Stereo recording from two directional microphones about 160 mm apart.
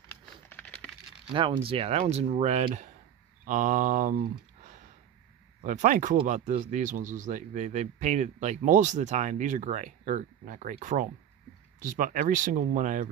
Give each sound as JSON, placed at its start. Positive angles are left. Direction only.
{"t": 0.5, "sound": "a sound", "side_deg": 10}
{"t": 1.3, "sound": "speech", "side_deg": -35}
{"t": 5.6, "sound": "speech", "side_deg": -50}